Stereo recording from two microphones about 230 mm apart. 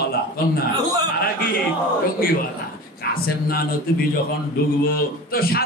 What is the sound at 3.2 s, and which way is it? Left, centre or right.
Speech, left.